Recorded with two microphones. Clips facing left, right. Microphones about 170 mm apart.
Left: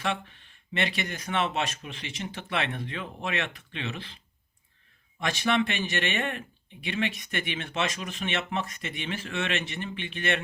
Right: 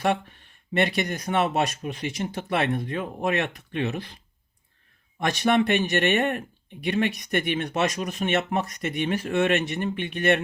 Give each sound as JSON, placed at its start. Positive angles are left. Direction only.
{"t": 0.0, "sound": "speech", "side_deg": -50}
{"t": 5.2, "sound": "speech", "side_deg": -45}